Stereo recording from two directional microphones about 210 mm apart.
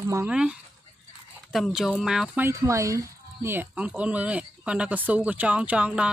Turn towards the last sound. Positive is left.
turn(degrees=-5)  # may be behind; listen again after turning